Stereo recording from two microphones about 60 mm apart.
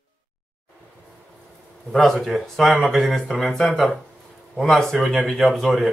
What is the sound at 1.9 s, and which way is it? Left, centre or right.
Speech, centre.